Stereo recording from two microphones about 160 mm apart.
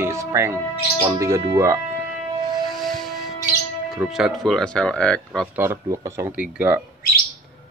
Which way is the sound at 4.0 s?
Centre (ahead or behind).